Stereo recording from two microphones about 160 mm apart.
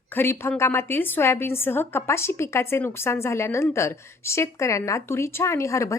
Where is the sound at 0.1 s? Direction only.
15° left (ahead or behind).